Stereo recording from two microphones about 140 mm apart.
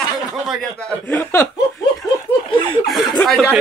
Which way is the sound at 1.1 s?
15° left (ahead or behind).